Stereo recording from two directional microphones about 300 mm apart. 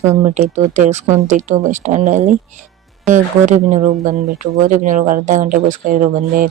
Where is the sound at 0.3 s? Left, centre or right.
Right.